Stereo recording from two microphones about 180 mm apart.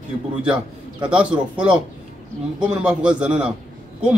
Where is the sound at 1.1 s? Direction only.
5° right (ahead or behind).